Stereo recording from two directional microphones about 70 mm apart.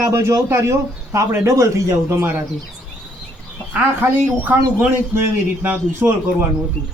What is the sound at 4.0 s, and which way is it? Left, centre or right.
A man's voice, right.